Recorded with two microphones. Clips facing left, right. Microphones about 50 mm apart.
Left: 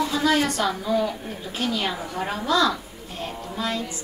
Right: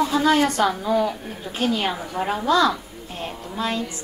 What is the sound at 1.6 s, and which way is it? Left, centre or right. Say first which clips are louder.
Speech: right 3 dB; right.